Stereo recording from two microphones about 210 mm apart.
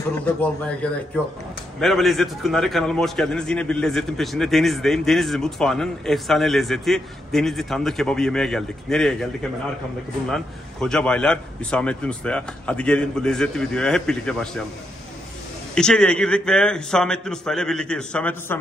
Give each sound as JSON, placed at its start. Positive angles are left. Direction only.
{"t": 1.8, "sound": "a man's voice", "side_deg": 0}
{"t": 15.7, "sound": "a man's voice", "side_deg": 5}